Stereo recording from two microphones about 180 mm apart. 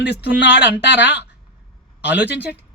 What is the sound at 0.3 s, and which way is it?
Speech, 70° left (ahead or behind).